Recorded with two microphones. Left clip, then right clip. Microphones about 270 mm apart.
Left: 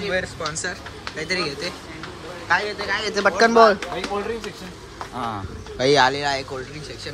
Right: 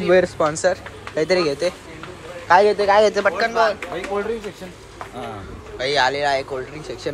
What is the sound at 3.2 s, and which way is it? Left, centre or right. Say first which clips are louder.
Speech: left 4 dB; left.